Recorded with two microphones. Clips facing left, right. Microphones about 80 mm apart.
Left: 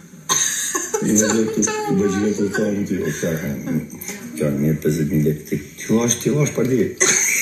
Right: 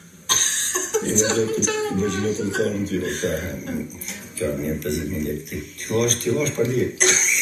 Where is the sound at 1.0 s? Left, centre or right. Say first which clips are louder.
Left 5 dB; left.